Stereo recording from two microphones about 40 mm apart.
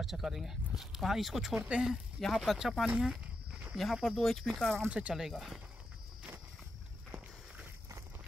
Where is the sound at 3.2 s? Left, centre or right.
Right.